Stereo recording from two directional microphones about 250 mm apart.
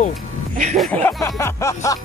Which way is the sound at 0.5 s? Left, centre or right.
Right.